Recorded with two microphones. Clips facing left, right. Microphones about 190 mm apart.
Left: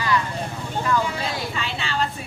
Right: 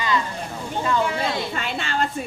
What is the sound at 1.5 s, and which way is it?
Speech, 50° right (ahead or behind).